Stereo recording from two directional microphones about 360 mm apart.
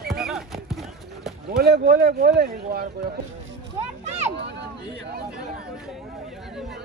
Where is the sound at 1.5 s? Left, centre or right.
Right.